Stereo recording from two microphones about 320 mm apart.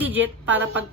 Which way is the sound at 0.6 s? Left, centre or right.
Right.